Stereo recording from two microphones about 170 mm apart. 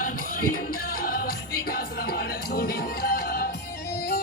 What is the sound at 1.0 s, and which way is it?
Music, 55° left (ahead or behind).